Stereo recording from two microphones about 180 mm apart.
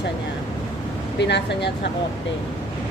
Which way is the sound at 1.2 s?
70° left (ahead or behind).